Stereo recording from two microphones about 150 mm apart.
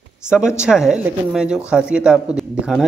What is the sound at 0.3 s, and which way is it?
Speech, 5° right (ahead or behind).